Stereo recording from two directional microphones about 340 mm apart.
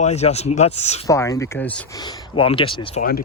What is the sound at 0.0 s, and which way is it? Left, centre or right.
Speech, centre.